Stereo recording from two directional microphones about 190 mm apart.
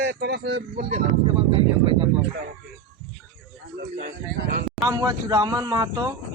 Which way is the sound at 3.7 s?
60° right (ahead or behind).